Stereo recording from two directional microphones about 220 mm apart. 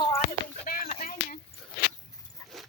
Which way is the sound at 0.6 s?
40° left (ahead or behind).